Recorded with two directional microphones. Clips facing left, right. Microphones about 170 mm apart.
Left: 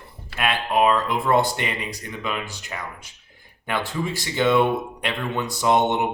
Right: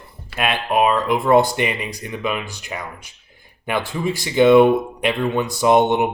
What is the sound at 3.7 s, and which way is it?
Speech, 15° right (ahead or behind).